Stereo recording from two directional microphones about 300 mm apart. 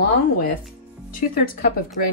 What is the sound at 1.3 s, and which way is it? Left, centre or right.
Speech, left.